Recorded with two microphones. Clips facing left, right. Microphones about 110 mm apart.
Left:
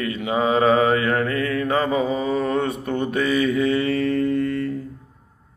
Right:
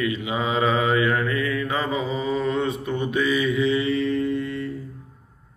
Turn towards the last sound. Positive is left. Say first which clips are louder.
# left 4 dB
turn(degrees=55)  # may be behind; listen again after turning